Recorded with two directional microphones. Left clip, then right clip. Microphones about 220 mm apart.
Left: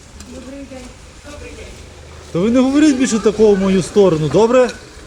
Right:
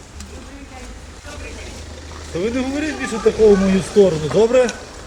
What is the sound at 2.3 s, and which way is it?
Speech, 20° left (ahead or behind).